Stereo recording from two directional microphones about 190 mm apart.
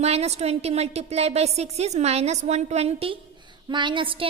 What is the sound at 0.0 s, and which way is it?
A woman's voice, 35° right (ahead or behind).